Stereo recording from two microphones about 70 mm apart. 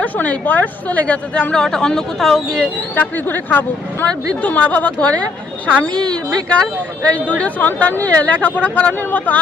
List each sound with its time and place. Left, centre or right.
0.0 s a woman's voice: left; by 2.6 s centre
2.9 s a woman's voice: left
7.0 s speech: centre